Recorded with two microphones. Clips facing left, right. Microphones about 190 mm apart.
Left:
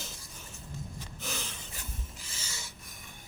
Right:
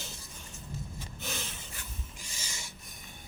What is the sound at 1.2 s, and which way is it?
Snort, centre (ahead or behind).